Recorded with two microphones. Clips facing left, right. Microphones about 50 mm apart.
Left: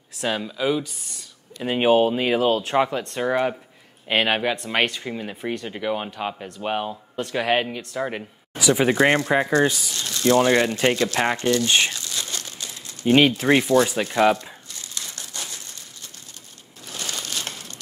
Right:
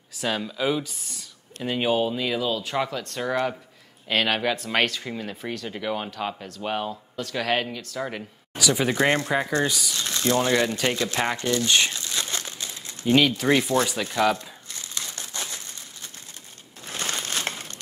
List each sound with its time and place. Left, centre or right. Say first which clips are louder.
0.2 s speech: left 2 dB; centre
1.7 s speech: left 6 dB; left
2.8 s speech: left 5 dB; left
3.2 s speech: left 3 dB; centre
5.7 s speech: even; centre
7.2 s speech: left 4 dB; left
9.9 s speech: right 1 dB; right
10.2 s speech: left 5 dB; left
11.9 s crumpling: right 1 dB; right
13.0 s speech: left 3 dB; left
14.7 s crushing: right 2 dB; right
16.8 s crumpling: right 2 dB; right